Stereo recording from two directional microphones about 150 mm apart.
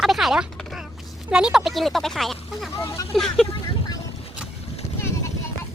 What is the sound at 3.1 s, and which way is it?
Speech, centre (ahead or behind).